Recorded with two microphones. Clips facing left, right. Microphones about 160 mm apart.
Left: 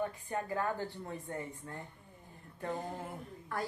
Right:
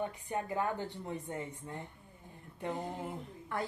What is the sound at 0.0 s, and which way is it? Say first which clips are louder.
A woman's voice: even; 20° right (ahead or behind).